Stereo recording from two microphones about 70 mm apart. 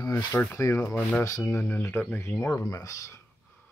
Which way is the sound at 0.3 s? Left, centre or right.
Left.